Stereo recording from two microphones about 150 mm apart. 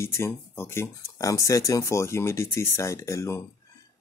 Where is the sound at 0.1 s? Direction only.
15° left (ahead or behind).